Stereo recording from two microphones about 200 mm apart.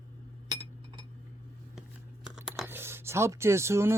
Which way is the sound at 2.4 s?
Centre (ahead or behind).